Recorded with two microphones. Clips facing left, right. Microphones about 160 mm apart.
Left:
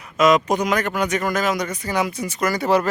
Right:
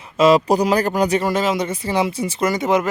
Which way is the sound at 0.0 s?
30° right (ahead or behind).